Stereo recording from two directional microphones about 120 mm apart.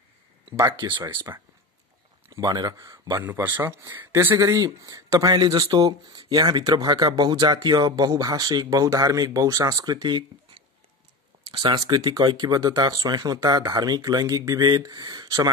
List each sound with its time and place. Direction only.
0.5 s speech: 30° right (ahead or behind)
3.3 s speech: 35° right (ahead or behind)
3.6 s speech: 25° right (ahead or behind)